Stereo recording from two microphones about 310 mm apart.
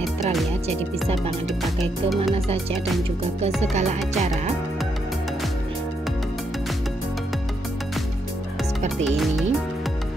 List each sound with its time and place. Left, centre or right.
2.3 s music: centre
3.7 s music: right
9.0 s speech: centre